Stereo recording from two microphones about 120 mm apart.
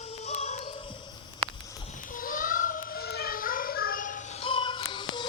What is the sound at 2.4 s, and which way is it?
Child singing, 90° left.